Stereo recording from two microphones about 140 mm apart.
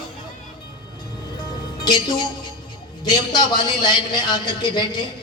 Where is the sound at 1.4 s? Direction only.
30° left (ahead or behind).